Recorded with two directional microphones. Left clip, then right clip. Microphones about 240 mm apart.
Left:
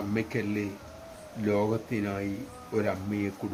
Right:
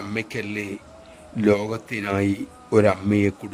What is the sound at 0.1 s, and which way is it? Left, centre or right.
A man's voice, right.